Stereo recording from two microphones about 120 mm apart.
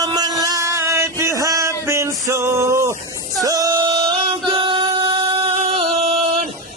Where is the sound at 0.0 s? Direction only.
30° right (ahead or behind).